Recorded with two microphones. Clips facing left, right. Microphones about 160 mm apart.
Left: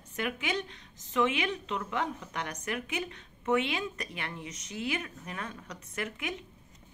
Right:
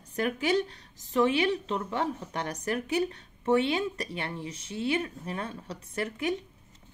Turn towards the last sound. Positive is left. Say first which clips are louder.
# right 6 dB
turn(degrees=-35)  # may be behind; listen again after turning